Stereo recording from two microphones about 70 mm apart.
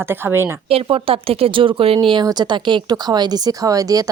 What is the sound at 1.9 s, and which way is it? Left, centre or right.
Speech, right.